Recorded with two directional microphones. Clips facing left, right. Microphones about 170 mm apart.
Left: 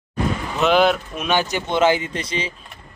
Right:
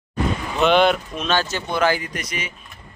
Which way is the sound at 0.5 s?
Centre (ahead or behind).